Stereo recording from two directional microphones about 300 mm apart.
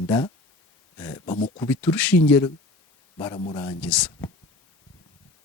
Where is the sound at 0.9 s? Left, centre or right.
Centre.